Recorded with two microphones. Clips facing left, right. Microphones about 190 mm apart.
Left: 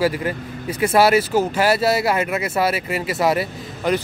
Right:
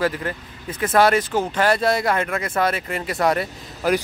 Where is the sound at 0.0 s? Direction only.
10° left (ahead or behind).